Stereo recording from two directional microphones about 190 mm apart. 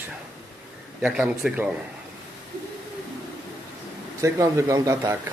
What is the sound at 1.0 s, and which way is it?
Speech, 5° right (ahead or behind).